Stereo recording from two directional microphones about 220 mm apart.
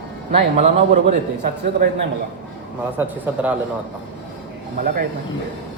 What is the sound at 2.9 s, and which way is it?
Speech, 10° right (ahead or behind).